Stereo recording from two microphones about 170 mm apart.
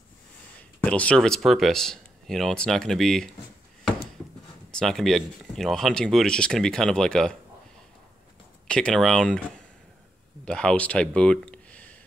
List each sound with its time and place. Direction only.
0.8 s speech: 5° left (ahead or behind)
4.6 s speech: 5° left (ahead or behind)
8.6 s speech: 5° left (ahead or behind)
10.4 s speech: 5° left (ahead or behind)